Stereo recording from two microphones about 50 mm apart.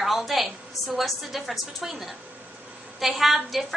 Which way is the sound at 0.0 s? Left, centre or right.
Centre.